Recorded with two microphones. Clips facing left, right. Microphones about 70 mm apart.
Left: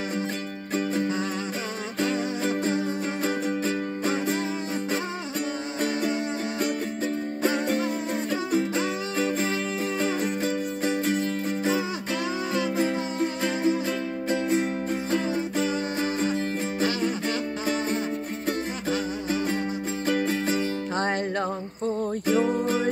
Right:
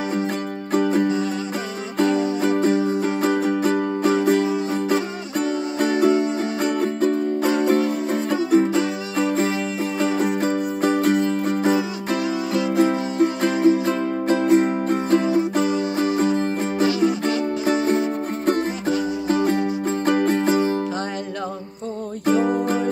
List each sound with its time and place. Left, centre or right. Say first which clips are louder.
2.0 s music: right 8 dB; right
5.9 s music: right 9 dB; right
11.6 s music: right 6 dB; right
12.7 s music: right 7 dB; right
15.2 s music: right 7 dB; right
17.8 s music: right 7 dB; right
22.2 s music: right 6 dB; right